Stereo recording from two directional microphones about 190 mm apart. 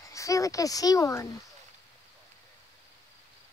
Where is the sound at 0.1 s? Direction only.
15° left (ahead or behind).